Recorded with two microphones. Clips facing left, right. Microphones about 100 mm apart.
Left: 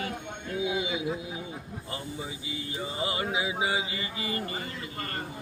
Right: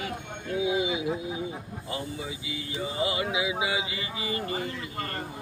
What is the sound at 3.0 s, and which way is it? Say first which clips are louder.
Mantra: right 2 dB; 35° left (ahead or behind).